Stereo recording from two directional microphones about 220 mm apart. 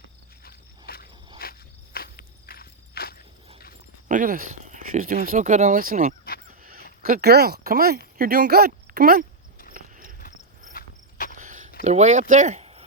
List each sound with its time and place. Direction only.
0.4 s a sound: 45° left (ahead or behind)
1.4 s walk: 45° left (ahead or behind)
4.1 s speech: 40° right (ahead or behind)
6.6 s crow: 40° right (ahead or behind)
7.0 s speech: 45° right (ahead or behind)
9.7 s a sound: 40° right (ahead or behind)
10.8 s cricket: 40° left (ahead or behind)
11.3 s a sound: 35° right (ahead or behind)
11.8 s speech: 30° right (ahead or behind)